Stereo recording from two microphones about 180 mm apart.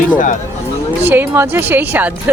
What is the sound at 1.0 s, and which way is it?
Speech, 10° right (ahead or behind).